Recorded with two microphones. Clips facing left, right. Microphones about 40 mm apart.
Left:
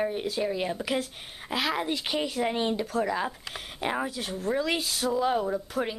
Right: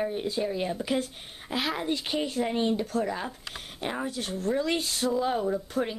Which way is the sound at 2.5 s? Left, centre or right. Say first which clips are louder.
Right 1 dB; left.